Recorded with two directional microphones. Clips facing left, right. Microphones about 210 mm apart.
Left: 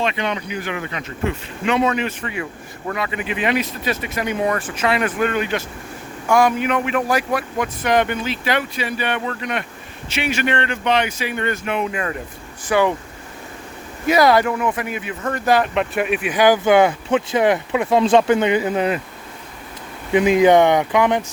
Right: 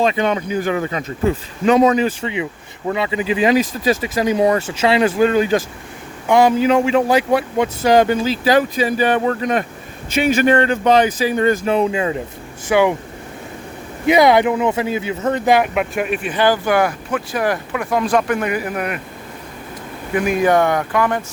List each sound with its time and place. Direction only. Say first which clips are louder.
0.0 s speech: right 6 dB; 40° right (ahead or behind)
2.2 s speech: right 4 dB; 20° right (ahead or behind)
6.2 s speech: right 4 dB; 25° right (ahead or behind)
11.9 s speech: right 5 dB; 20° right (ahead or behind)
14.1 s speech: right 3 dB; 20° right (ahead or behind); by 18.9 s 25° left (ahead or behind)
20.1 s speech: left 3 dB; 20° left (ahead or behind)